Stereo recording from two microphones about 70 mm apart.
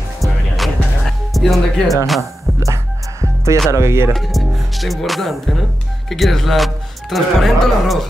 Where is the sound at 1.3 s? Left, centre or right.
Centre.